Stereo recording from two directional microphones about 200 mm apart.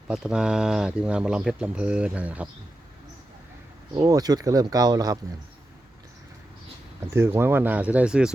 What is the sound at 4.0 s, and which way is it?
Speech, 20° right (ahead or behind).